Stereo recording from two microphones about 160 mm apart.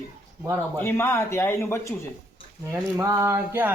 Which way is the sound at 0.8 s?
15° left (ahead or behind).